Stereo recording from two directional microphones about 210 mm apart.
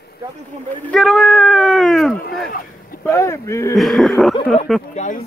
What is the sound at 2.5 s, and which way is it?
Speech, 45° left (ahead or behind).